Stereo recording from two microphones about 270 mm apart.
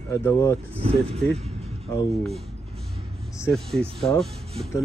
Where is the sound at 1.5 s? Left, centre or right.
Right.